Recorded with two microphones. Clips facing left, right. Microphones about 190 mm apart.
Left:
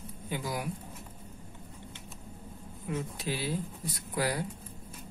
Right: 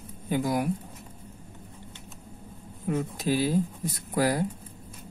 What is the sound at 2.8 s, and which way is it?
Speech, 50° right (ahead or behind).